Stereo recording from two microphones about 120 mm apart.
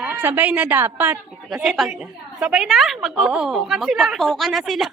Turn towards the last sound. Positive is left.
turn(degrees=0)  # may be behind; listen again after turning